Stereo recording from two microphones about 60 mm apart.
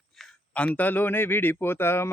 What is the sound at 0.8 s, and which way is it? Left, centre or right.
Speech, left.